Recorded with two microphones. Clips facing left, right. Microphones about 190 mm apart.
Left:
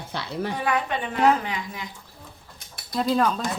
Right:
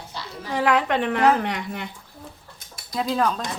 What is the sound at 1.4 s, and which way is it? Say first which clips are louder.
Speech: right 3 dB; 65° right (ahead or behind).